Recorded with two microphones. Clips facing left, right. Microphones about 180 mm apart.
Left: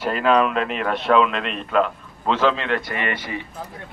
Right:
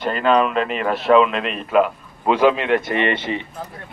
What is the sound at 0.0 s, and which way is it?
A man's voice, 5° left (ahead or behind).